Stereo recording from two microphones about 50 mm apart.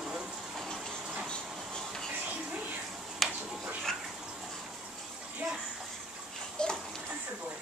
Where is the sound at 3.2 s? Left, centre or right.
Centre.